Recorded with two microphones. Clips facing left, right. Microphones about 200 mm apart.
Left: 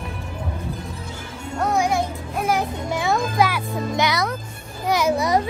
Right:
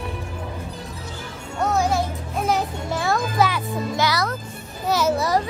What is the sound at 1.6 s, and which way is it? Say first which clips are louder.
Music: even; 15° left (ahead or behind).